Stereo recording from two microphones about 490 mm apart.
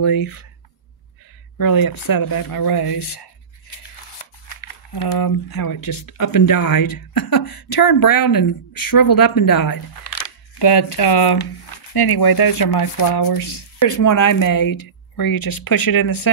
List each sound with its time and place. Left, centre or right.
0.0 s speech: left
1.6 s speech: left
4.5 s speech: left
10.6 s speech: left
13.8 s speech: left